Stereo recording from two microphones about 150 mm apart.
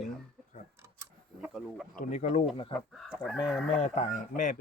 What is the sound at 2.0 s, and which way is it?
Speech, 50° left (ahead or behind).